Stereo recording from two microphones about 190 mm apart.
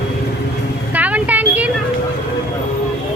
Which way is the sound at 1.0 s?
10° right (ahead or behind).